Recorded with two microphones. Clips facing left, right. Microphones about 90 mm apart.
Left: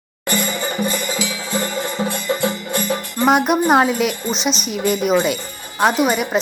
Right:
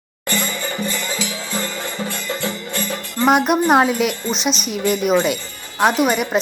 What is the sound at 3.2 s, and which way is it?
A woman's voice, centre (ahead or behind).